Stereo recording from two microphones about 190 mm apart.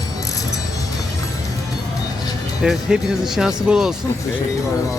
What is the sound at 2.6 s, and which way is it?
Speech, centre (ahead or behind).